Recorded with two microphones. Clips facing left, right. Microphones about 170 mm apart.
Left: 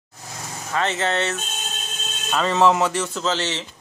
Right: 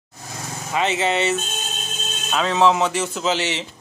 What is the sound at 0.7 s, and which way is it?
Speech, 10° right (ahead or behind).